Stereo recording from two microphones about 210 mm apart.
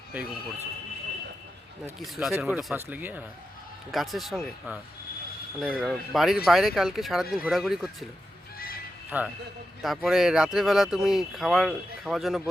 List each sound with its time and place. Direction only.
0.1 s speech: 5° right (ahead or behind)
1.8 s speech: centre (ahead or behind)
8.5 s neigh: 45° left (ahead or behind)
9.0 s speech: 10° right (ahead or behind)